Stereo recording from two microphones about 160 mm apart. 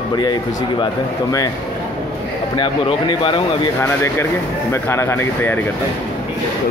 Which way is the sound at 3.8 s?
15° left (ahead or behind).